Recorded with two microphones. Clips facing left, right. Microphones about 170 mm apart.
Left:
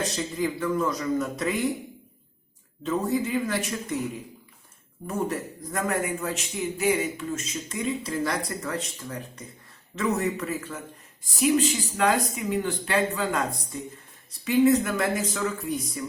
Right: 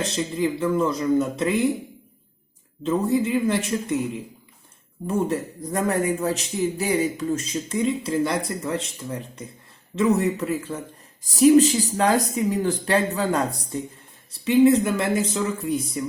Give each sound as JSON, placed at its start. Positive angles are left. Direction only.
{"t": 0.0, "sound": "a man's voice", "side_deg": -25}
{"t": 2.8, "sound": "a man's voice", "side_deg": -25}
{"t": 5.0, "sound": "a man's voice", "side_deg": -30}
{"t": 14.4, "sound": "a man's voice", "side_deg": -25}